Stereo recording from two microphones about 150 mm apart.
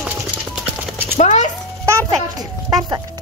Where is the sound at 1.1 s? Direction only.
50° left (ahead or behind).